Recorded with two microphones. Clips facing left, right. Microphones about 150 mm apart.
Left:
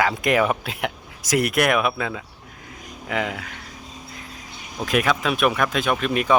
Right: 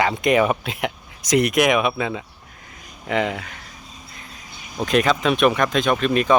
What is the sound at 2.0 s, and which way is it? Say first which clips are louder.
Speech: right 3 dB; 10° right (ahead or behind).